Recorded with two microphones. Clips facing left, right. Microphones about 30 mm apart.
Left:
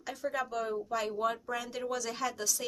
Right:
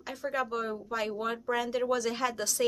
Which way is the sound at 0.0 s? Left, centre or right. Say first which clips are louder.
Right 2 dB; centre.